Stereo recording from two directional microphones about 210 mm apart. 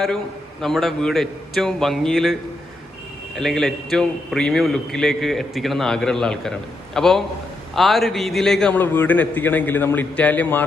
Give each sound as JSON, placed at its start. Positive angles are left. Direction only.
{"t": 0.6, "sound": "a man's voice", "side_deg": 0}